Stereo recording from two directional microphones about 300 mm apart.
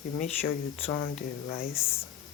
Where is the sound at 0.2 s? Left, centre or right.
Left.